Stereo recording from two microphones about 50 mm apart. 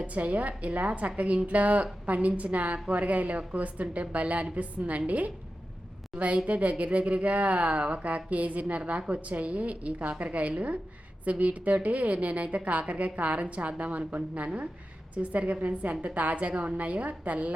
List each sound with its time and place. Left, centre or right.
0.0 s a woman's voice: right